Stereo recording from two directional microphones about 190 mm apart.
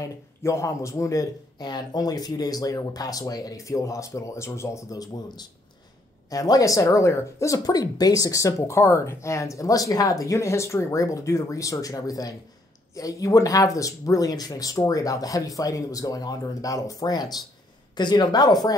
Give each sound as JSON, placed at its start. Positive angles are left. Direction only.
{"t": 0.0, "sound": "speech", "side_deg": 15}